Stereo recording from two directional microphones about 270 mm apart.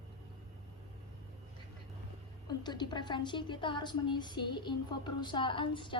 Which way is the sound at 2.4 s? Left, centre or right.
Centre.